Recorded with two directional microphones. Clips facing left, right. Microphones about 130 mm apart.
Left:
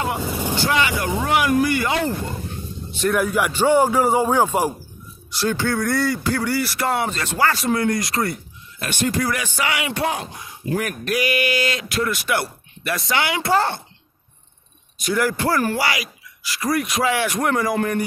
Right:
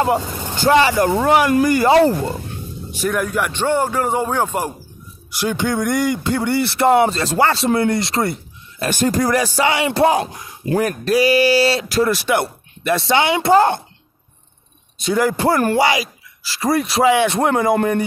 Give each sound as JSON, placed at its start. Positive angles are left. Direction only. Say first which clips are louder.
{"t": 0.2, "sound": "speech", "louder": "left 3 dB", "side_deg": 10}
{"t": 0.7, "sound": "speech", "louder": "right 9 dB", "side_deg": -35}
{"t": 0.9, "sound": "speech", "louder": "right 6 dB", "side_deg": -50}
{"t": 3.1, "sound": "a man's voice", "louder": "left 1 dB", "side_deg": 5}
{"t": 5.3, "sound": "speech", "louder": "right 2 dB", "side_deg": -15}
{"t": 8.7, "sound": "speech", "louder": "right 5 dB", "side_deg": -40}
{"t": 10.1, "sound": "speech", "louder": "right 9 dB", "side_deg": -75}
{"t": 10.8, "sound": "speech", "louder": "right 8 dB", "side_deg": -35}
{"t": 15.0, "sound": "speech", "louder": "right 4 dB", "side_deg": -25}